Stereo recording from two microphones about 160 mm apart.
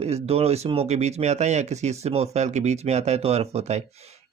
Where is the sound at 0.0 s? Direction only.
40° right (ahead or behind).